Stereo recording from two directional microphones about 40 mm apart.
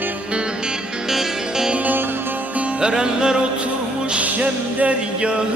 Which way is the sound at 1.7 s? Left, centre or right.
Right.